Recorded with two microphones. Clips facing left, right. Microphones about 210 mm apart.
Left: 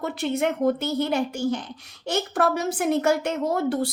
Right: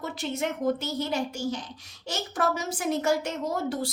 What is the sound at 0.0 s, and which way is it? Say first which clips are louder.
A child's voice: left 6 dB; 60° left (ahead or behind).